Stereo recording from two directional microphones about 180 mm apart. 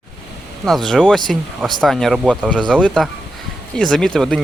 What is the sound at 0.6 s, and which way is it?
Speech, centre (ahead or behind).